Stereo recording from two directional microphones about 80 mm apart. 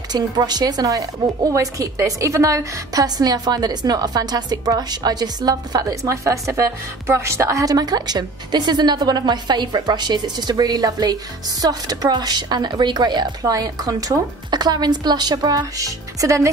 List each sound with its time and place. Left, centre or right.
0.1 s a woman's voice: right
13.4 s a woman's voice: right